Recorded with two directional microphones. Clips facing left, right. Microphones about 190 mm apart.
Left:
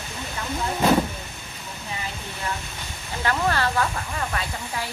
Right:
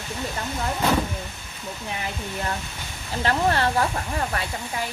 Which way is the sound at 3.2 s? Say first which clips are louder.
Right 2 dB; 25° right (ahead or behind).